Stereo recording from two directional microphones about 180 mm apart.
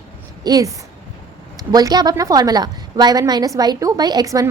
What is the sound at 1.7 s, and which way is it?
A woman's voice, 20° right (ahead or behind).